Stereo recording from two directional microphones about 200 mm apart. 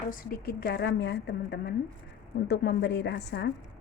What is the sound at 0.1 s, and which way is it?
A woman's voice, 45° left (ahead or behind).